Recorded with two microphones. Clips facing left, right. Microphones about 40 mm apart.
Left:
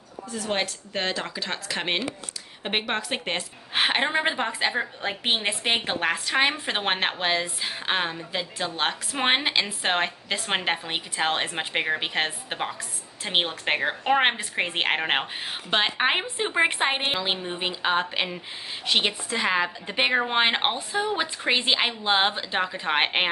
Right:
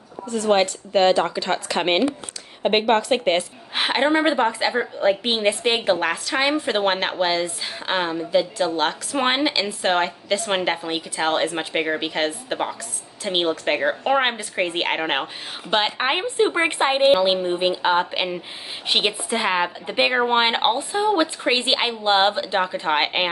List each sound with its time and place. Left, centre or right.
0.5 s a woman's voice: centre
2.8 s a woman's voice: centre
3.7 s a woman's voice: centre
18.9 s a woman's voice: right; by 23.2 s centre